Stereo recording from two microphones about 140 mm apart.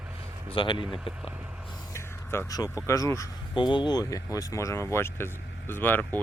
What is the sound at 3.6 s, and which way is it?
Speech, 35° left (ahead or behind).